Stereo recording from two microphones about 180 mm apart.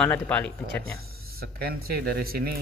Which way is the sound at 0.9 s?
60° right (ahead or behind).